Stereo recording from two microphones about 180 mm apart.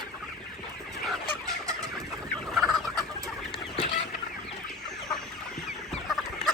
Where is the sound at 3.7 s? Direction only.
35° left (ahead or behind).